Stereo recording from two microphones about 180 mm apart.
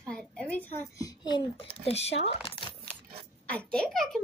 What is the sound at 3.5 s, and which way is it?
Speech, 5° left (ahead or behind).